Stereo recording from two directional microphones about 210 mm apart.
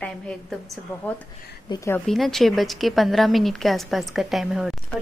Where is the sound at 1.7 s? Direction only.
20° left (ahead or behind).